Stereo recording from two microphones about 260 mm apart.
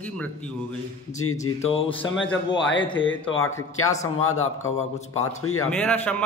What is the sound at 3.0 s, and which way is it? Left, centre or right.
Speech, left.